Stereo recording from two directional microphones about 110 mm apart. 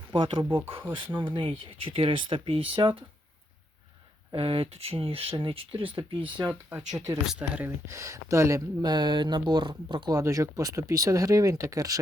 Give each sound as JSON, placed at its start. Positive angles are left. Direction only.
{"t": 0.1, "sound": "speech", "side_deg": -50}
{"t": 4.4, "sound": "speech", "side_deg": -55}
{"t": 6.5, "sound": "speech", "side_deg": -15}
{"t": 6.9, "sound": "speech", "side_deg": -30}
{"t": 7.3, "sound": "speech", "side_deg": -10}
{"t": 7.9, "sound": "speech", "side_deg": -25}
{"t": 8.8, "sound": "speech", "side_deg": -40}
{"t": 10.2, "sound": "speech", "side_deg": -30}